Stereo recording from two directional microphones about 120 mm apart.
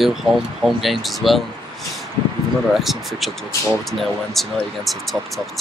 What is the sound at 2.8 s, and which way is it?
Speech, centre (ahead or behind).